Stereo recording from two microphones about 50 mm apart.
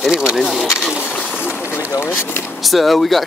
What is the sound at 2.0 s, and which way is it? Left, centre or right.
Speech, left.